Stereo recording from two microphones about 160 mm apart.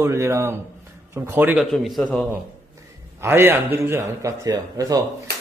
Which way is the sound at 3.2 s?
15° right (ahead or behind).